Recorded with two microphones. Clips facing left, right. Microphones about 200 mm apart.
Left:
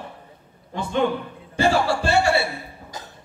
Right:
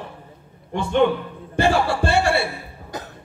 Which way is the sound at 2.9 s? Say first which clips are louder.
Right 10 dB; 60° right (ahead or behind).